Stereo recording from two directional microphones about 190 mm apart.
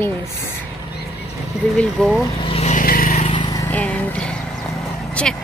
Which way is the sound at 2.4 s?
35° left (ahead or behind).